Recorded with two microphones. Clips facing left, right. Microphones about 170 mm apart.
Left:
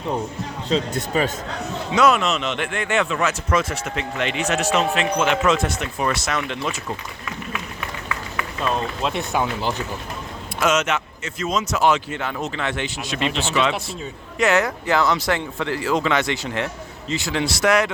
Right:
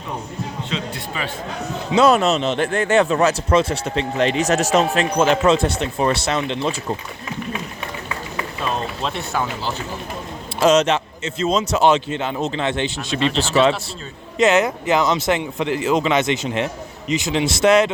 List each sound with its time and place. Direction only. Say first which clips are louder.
0.7 s speech: left 6 dB; 40° left (ahead or behind)
1.9 s speech: right 3 dB; 30° right (ahead or behind)
9.0 s speech: left 2 dB; 15° left (ahead or behind)
10.6 s speech: right 5 dB; 35° right (ahead or behind)
14.3 s speech: right 3 dB; 20° right (ahead or behind)